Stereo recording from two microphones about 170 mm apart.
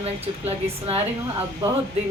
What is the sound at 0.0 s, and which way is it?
Female singing, 35° right (ahead or behind).